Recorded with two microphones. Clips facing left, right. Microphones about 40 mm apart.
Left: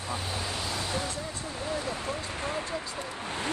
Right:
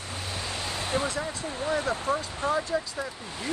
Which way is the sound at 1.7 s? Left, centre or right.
Right.